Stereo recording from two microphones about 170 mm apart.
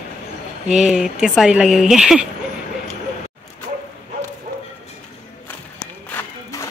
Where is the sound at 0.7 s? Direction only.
5° right (ahead or behind).